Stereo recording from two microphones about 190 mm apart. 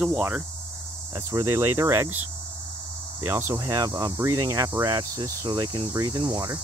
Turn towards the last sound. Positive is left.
turn(degrees=-20)  # may be behind; listen again after turning